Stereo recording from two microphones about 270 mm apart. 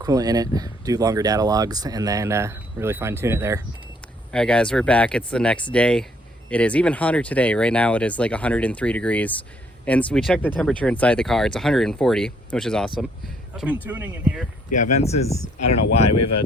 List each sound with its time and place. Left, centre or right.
0.0 s speech: centre
4.3 s speech: centre
14.9 s speech: left
16.0 s speech: left